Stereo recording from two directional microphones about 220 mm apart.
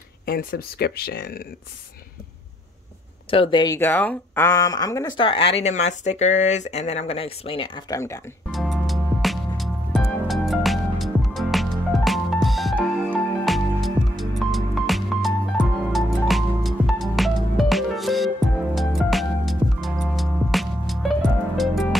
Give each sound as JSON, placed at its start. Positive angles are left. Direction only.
{"t": 0.2, "sound": "speech", "side_deg": 40}
{"t": 3.3, "sound": "speech", "side_deg": 25}
{"t": 8.5, "sound": "music", "side_deg": 0}